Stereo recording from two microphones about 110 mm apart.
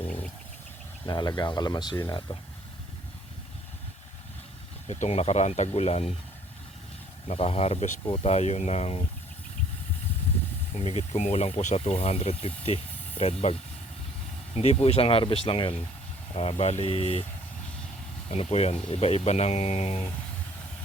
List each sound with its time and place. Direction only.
1.0 s speech: 40° left (ahead or behind)
4.9 s speech: 85° left; by 6.1 s 70° left (ahead or behind)
7.3 s speech: 65° left (ahead or behind)
10.8 s speech: 85° left; by 13.3 s 65° left (ahead or behind)
14.5 s speech: 70° left (ahead or behind)
18.3 s speech: 70° left (ahead or behind)